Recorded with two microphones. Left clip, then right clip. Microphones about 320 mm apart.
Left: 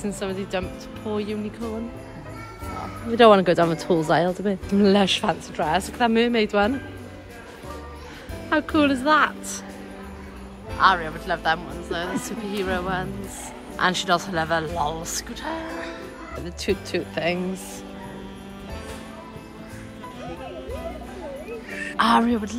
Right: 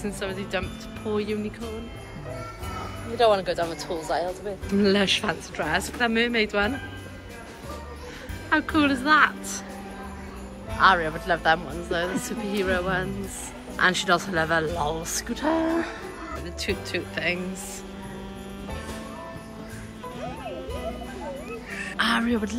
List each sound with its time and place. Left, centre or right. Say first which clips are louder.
0.0 s a woman's voice: left 2 dB; centre
3.2 s speech: left 6 dB; centre
3.9 s speech: left 9 dB; left
4.6 s a woman's voice: left 2 dB; centre
8.5 s a woman's voice: left 2 dB; centre
10.8 s speech: even; centre
16.5 s a woman's voice: left 4 dB; centre
21.9 s a woman's voice: left 5 dB; centre